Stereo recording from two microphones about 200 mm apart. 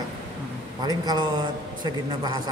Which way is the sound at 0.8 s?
20° right (ahead or behind).